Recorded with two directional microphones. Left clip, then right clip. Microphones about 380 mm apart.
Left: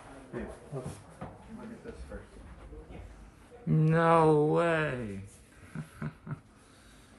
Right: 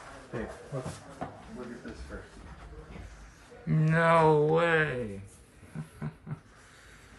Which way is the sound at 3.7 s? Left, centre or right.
Centre.